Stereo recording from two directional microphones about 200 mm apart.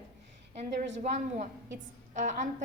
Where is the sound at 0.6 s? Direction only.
35° right (ahead or behind).